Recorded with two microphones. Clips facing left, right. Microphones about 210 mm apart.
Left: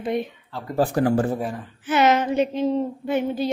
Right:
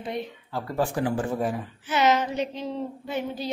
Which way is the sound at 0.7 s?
40° left (ahead or behind).